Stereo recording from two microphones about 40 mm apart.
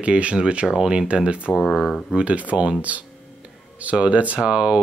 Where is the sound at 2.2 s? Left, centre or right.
Right.